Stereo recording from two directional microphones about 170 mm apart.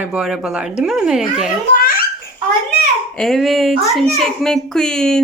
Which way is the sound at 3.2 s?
Centre (ahead or behind).